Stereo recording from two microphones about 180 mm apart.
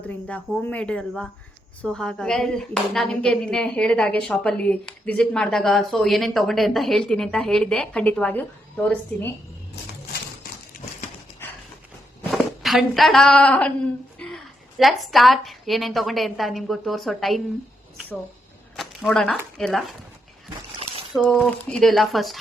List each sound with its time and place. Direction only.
0.0 s speech: 10° left (ahead or behind)
10.1 s a sound: 60° left (ahead or behind)
12.3 s a woman's voice: centre (ahead or behind)
18.8 s a sound: centre (ahead or behind)
19.5 s speech: centre (ahead or behind)
21.1 s speech: centre (ahead or behind)